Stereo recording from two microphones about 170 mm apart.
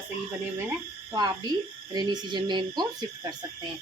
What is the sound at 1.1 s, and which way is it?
Speech, 25° right (ahead or behind).